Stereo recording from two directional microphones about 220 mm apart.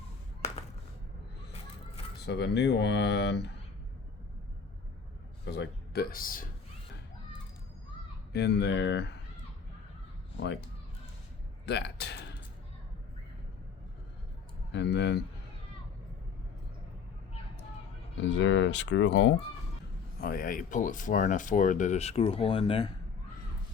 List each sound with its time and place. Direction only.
2.2 s speech: 50° left (ahead or behind)
5.5 s speech: 50° left (ahead or behind)
8.3 s speech: 50° left (ahead or behind)
11.7 s a sound: 50° left (ahead or behind)
14.7 s speech: 55° left (ahead or behind)
18.3 s speech: 55° left (ahead or behind)
20.2 s speech: 40° left (ahead or behind); by 22.9 s 25° left (ahead or behind)